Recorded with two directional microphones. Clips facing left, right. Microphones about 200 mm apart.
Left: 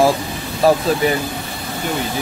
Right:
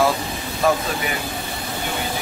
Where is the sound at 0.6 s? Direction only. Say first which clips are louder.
Left 5 dB; 35° left (ahead or behind).